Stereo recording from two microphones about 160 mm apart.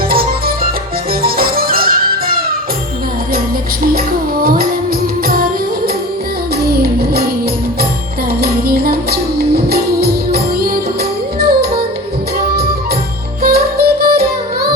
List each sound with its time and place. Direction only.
0.1 s music: 70° right (ahead or behind)
4.4 s music: 70° right (ahead or behind)
8.3 s music: 70° right (ahead or behind)
13.4 s music: 75° right (ahead or behind)